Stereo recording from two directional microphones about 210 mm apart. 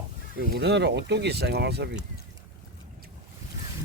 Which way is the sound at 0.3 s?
50° right (ahead or behind).